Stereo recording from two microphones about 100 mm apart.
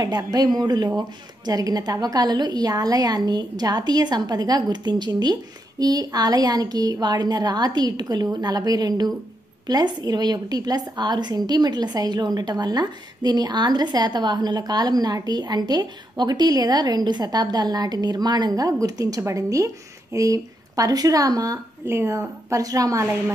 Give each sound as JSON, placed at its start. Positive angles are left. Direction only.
{"t": 0.3, "sound": "a woman's voice", "side_deg": -40}
{"t": 21.8, "sound": "a woman's voice", "side_deg": -25}